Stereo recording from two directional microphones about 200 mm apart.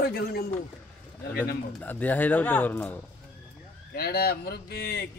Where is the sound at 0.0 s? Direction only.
50° left (ahead or behind).